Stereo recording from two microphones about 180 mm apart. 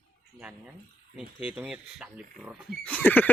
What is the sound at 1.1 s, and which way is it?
Speech, 5° right (ahead or behind).